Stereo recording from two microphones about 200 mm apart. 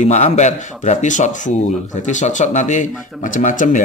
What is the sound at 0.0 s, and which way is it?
A man's voice, 35° left (ahead or behind).